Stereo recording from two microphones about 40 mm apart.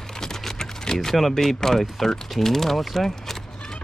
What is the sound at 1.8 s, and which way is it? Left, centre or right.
Speech, centre.